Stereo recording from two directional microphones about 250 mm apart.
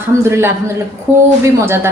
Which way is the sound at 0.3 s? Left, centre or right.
Centre.